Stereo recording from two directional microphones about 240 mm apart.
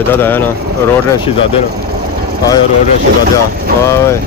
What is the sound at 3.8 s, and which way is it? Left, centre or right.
Speech, centre.